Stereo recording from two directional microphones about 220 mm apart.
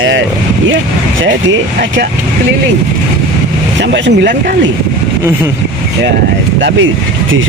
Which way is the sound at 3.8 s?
55° right (ahead or behind).